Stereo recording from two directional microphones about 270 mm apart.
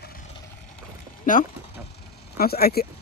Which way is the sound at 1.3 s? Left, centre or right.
Left.